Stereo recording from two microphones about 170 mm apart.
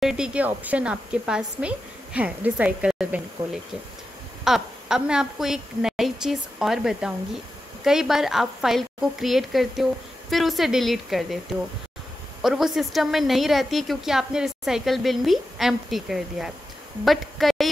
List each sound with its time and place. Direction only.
0.0 s speech: 5° right (ahead or behind)
4.5 s a woman's voice: 5° right (ahead or behind)
12.4 s a woman's voice: centre (ahead or behind)